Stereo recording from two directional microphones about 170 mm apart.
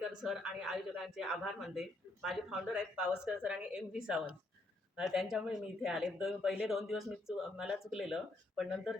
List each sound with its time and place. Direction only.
0.1 s speech: 5° right (ahead or behind)